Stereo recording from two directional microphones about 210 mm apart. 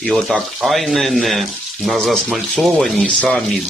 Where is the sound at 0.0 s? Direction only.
Centre (ahead or behind).